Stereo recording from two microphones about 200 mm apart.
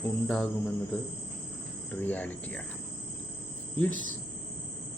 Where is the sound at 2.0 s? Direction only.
10° left (ahead or behind).